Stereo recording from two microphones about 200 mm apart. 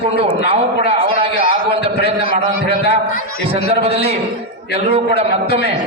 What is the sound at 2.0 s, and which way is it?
Speech, 30° right (ahead or behind).